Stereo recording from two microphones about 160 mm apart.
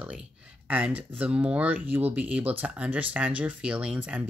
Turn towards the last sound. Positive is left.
turn(degrees=-10)  # may be behind; listen again after turning